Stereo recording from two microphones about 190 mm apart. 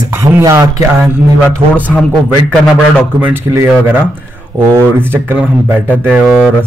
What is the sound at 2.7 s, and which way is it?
Speech, 5° right (ahead or behind).